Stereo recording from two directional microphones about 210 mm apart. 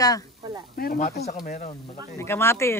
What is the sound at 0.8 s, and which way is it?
Speech, 40° left (ahead or behind).